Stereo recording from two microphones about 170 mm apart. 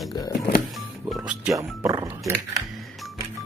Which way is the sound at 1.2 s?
5° right (ahead or behind).